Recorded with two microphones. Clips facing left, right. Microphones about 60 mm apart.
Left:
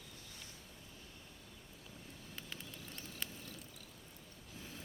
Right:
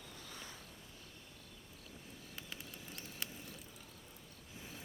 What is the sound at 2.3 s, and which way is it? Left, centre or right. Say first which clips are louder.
Vehicle: left 1 dB; centre.